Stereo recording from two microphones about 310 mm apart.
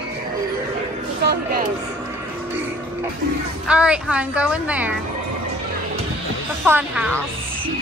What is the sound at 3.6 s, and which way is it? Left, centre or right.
A woman's voice, centre.